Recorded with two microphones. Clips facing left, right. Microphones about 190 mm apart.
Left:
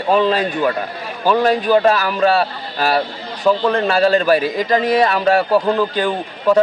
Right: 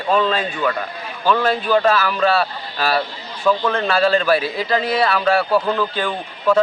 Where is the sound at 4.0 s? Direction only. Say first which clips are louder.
Left 2 dB; 40° left (ahead or behind).